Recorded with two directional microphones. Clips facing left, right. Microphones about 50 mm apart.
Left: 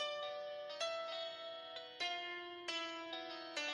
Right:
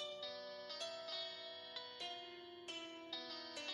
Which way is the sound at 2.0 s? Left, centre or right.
Left.